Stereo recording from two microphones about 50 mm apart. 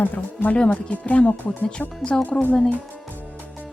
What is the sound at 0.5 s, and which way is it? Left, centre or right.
Speech, left.